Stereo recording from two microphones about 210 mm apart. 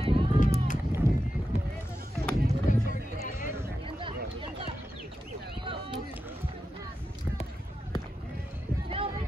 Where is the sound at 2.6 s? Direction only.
40° left (ahead or behind).